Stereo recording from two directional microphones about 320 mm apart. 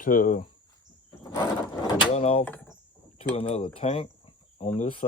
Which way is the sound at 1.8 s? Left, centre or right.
Centre.